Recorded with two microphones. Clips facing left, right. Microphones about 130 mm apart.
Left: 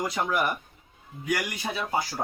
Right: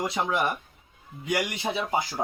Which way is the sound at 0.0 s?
25° right (ahead or behind).